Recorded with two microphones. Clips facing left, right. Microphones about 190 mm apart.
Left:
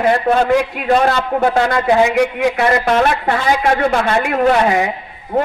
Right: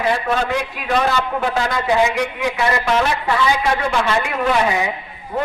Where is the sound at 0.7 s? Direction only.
50° left (ahead or behind).